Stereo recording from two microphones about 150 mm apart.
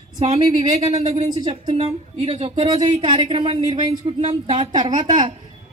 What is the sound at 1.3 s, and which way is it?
Speech, 30° right (ahead or behind).